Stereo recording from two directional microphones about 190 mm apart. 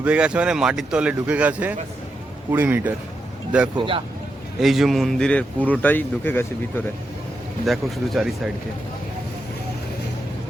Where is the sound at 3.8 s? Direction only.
25° right (ahead or behind).